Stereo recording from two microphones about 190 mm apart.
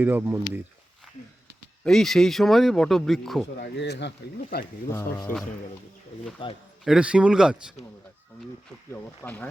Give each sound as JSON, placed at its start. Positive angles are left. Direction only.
{"t": 0.0, "sound": "speech", "side_deg": -10}
{"t": 1.8, "sound": "speech", "side_deg": 0}
{"t": 3.6, "sound": "speech", "side_deg": 65}
{"t": 5.3, "sound": "speech", "side_deg": 45}
{"t": 6.4, "sound": "a man's voice", "side_deg": 25}
{"t": 6.8, "sound": "speech", "side_deg": -5}
{"t": 8.9, "sound": "speech", "side_deg": 10}